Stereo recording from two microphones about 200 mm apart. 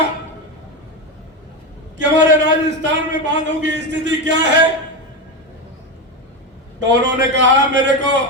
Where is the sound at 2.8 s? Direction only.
65° right (ahead or behind).